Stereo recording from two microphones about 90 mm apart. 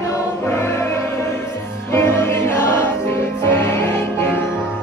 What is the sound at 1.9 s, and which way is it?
Music, 25° left (ahead or behind).